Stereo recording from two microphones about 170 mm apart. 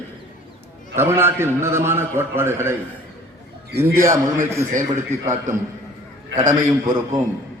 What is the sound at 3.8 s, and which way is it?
Speech, 15° right (ahead or behind).